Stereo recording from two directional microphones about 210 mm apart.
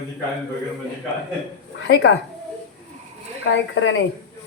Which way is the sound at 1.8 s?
55° left (ahead or behind).